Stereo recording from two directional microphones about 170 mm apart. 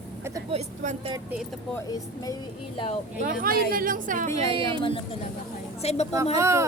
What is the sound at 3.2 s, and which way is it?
Speech, 60° right (ahead or behind).